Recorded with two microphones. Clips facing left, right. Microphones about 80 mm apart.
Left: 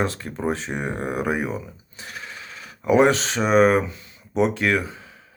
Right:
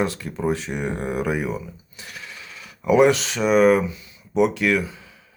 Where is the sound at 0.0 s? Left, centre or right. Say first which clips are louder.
Right 1 dB; left.